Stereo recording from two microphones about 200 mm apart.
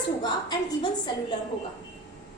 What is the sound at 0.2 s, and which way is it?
Speech, 20° left (ahead or behind).